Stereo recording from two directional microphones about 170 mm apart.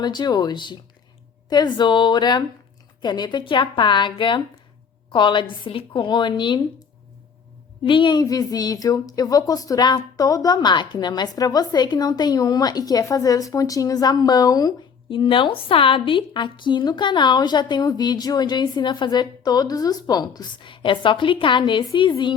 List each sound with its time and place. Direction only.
0.0 s a woman's voice: 25° left (ahead or behind)
7.9 s a woman's voice: 30° left (ahead or behind)